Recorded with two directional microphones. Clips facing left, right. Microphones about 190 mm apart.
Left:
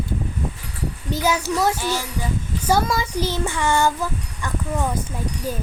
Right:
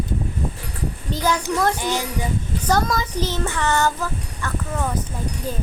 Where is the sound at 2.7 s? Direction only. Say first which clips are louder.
Left 1 dB; 10° left (ahead or behind).